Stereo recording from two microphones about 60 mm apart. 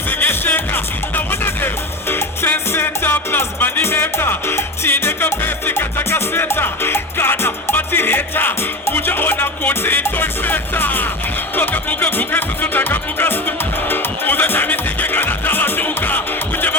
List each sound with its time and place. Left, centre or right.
0.1 s music: left